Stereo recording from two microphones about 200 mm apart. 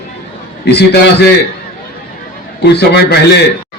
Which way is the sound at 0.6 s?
55° left (ahead or behind).